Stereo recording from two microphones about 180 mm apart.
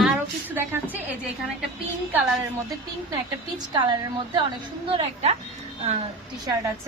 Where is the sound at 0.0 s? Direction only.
10° right (ahead or behind).